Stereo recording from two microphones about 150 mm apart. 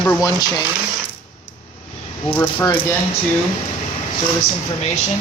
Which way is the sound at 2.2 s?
10° left (ahead or behind).